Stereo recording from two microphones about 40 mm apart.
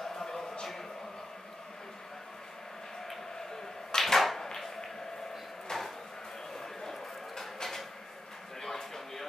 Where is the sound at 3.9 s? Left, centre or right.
Centre.